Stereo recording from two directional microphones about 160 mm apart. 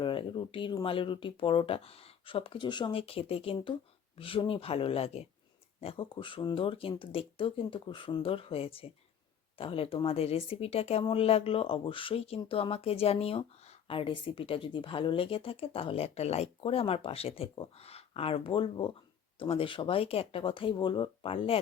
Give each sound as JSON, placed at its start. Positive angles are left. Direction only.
{"t": 0.0, "sound": "speech", "side_deg": 30}